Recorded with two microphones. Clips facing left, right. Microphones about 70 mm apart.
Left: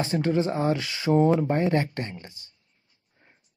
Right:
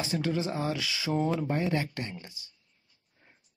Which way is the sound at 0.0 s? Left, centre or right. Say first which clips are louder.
Left 6 dB; left.